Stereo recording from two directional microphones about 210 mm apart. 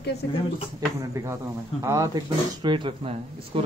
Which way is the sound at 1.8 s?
15° right (ahead or behind).